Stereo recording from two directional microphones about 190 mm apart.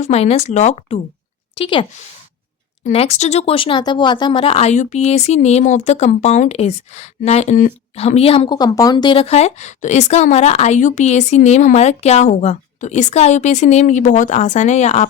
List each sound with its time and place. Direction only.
0.0 s a woman's voice: 35° left (ahead or behind)